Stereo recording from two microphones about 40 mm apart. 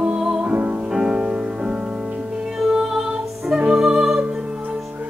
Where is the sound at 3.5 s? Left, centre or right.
Centre.